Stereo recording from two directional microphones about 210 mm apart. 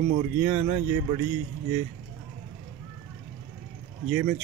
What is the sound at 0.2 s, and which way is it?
Speech, 10° right (ahead or behind).